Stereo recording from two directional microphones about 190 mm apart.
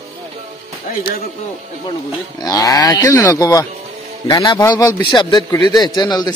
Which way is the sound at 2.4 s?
20° left (ahead or behind).